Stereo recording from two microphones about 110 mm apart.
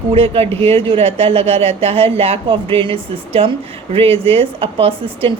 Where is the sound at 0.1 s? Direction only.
60° right (ahead or behind).